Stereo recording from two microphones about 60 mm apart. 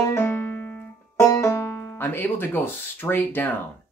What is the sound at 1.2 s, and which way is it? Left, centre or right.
Banjo, left.